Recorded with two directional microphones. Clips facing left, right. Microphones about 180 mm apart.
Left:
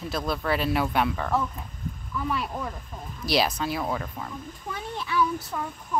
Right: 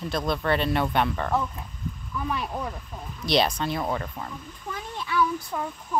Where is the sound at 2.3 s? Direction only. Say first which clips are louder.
Right 1 dB; 20° right (ahead or behind).